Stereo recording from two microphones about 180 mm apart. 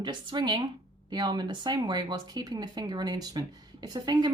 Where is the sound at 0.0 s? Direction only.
25° right (ahead or behind).